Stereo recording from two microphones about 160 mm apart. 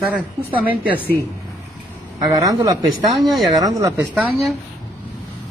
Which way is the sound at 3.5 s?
20° right (ahead or behind).